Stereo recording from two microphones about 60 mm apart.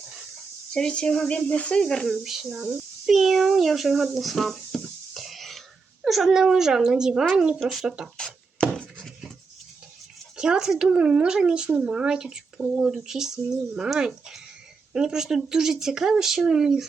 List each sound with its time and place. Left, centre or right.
0.7 s speech: centre
1.3 s speech: left
2.2 s a child's voice: centre
7.6 s a child's voice: centre
7.9 s speech: centre
8.2 s chopping: centre
10.3 s speech: centre